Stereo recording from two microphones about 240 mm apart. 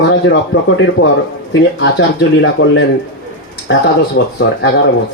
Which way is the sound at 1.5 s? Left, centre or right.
Left.